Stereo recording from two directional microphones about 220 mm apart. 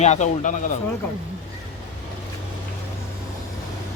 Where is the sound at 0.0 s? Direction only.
30° left (ahead or behind).